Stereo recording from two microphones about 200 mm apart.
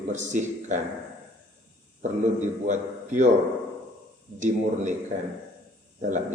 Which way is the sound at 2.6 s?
40° right (ahead or behind).